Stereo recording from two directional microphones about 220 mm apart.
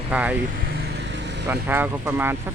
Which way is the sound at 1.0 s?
50° right (ahead or behind).